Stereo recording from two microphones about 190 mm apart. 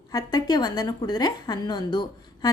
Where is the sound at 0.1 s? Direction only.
20° left (ahead or behind).